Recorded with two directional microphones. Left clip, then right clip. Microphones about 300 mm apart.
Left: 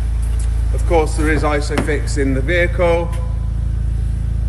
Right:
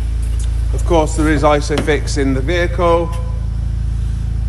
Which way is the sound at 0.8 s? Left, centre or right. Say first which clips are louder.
Right 2 dB; right.